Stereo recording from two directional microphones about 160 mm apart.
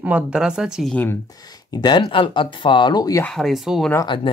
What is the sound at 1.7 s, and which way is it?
Speech, 25° left (ahead or behind).